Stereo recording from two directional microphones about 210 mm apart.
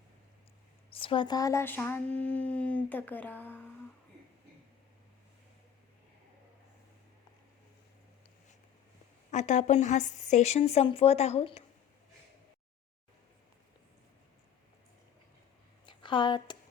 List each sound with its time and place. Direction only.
0.9 s speech: 25° left (ahead or behind); by 3.7 s 10° left (ahead or behind)
9.3 s a woman's voice: 35° left (ahead or behind)
15.9 s speech: 25° left (ahead or behind)